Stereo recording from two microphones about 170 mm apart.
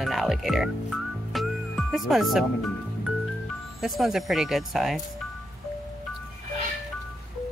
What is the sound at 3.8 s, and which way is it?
Speech, centre (ahead or behind).